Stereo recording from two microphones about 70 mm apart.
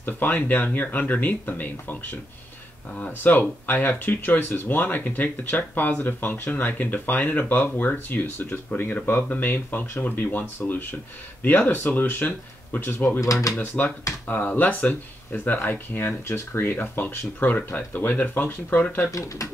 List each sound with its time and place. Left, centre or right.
0.0 s speech: left
13.2 s speech: left
13.6 s speech: left
19.0 s speech: left